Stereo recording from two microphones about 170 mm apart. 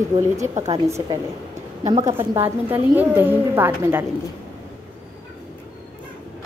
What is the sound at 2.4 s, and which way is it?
A woman's voice, 10° right (ahead or behind).